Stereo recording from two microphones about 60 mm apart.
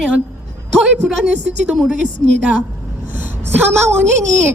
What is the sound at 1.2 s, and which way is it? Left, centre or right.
Speech, centre.